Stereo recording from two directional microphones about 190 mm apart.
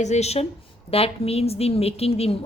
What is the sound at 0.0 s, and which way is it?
A woman's voice, 35° left (ahead or behind).